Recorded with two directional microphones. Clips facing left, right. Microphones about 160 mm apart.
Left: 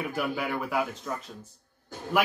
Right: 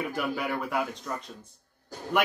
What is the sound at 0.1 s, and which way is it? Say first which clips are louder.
A man's voice: even; centre (ahead or behind).